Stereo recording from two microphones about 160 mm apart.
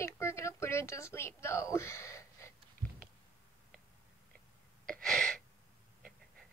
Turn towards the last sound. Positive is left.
turn(degrees=5)  # may be behind; listen again after turning